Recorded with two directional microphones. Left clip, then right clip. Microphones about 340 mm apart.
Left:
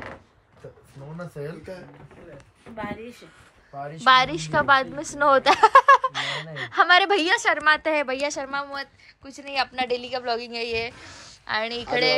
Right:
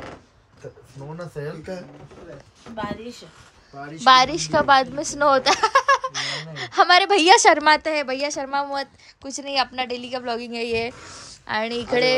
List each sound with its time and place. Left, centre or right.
1.4 s speech: right
2.7 s a woman's voice: centre
4.0 s a woman's voice: centre
7.8 s a woman's voice: centre